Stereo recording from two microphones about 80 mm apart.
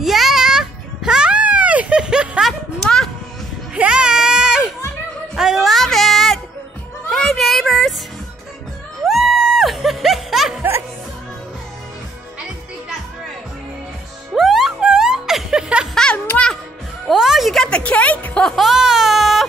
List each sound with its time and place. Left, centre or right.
0.0 s music: centre
2.8 s a sound: centre
3.7 s a sound: centre
5.3 s music: centre
7.1 s child singing: centre
9.0 s music: centre
14.3 s music: centre
15.9 s music: centre
17.1 s a sound: centre
17.6 s music: centre
18.6 s baby cry: centre